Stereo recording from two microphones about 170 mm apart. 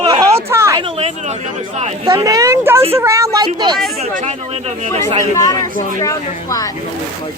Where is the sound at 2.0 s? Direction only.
20° right (ahead or behind).